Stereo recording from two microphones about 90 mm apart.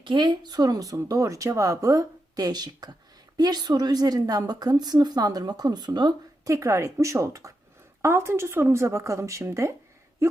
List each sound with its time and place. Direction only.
0.0 s a woman's voice: 60° right (ahead or behind)
6.5 s speech: 35° right (ahead or behind)